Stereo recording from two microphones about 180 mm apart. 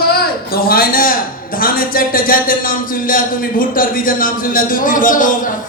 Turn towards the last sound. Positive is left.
turn(degrees=50)  # may be behind; listen again after turning